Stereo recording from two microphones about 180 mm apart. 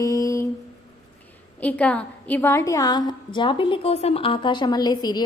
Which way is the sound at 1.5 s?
10° left (ahead or behind).